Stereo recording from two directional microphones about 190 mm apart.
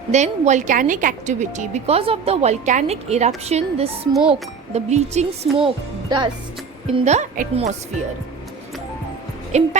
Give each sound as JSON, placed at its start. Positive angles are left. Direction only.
{"t": 0.1, "sound": "speech", "side_deg": -40}
{"t": 4.1, "sound": "a child's voice", "side_deg": -5}
{"t": 4.7, "sound": "speech", "side_deg": -35}
{"t": 6.9, "sound": "speech", "side_deg": -35}
{"t": 9.5, "sound": "speech", "side_deg": -35}